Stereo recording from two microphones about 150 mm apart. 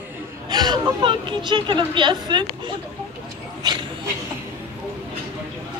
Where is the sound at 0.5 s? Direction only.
30° right (ahead or behind).